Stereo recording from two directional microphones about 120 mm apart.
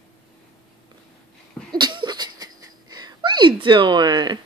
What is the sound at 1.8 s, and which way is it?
Sneeze, 40° right (ahead or behind).